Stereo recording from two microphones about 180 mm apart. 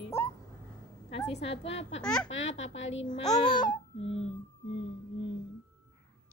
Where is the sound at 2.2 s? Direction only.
90° left.